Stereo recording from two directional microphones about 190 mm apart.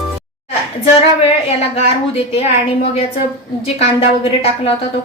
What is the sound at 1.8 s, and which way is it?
A woman's voice, 30° left (ahead or behind).